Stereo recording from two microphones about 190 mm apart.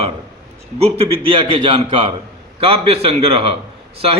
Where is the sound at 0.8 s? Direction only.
30° right (ahead or behind).